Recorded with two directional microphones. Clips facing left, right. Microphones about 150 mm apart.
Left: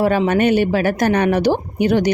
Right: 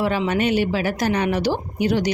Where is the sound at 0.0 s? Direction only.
45° left (ahead or behind).